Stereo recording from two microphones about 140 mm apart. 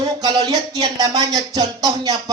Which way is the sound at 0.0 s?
30° right (ahead or behind).